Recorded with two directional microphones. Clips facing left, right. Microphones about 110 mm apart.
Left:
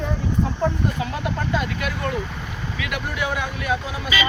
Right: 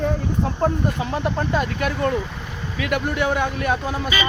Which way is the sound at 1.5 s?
40° right (ahead or behind).